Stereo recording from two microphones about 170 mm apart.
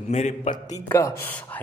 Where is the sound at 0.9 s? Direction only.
15° left (ahead or behind).